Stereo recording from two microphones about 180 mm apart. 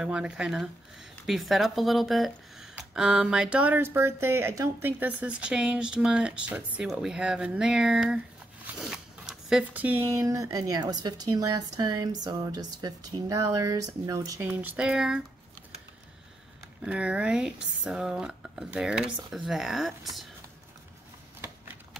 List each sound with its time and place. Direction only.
0.0 s speech: 5° right (ahead or behind)
16.8 s speech: 5° right (ahead or behind)